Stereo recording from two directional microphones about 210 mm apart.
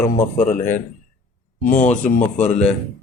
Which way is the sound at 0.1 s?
40° left (ahead or behind).